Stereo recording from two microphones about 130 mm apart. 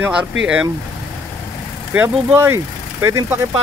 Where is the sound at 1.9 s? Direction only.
15° right (ahead or behind).